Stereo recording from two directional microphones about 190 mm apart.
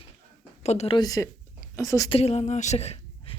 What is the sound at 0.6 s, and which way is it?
Speech, 35° left (ahead or behind).